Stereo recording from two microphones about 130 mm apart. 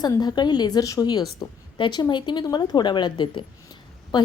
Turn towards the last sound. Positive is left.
turn(degrees=35)  # may be behind; listen again after turning